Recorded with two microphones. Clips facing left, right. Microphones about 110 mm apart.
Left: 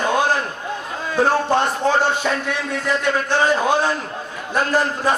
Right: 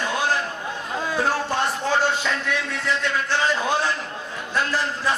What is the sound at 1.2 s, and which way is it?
Speech, 50° left (ahead or behind).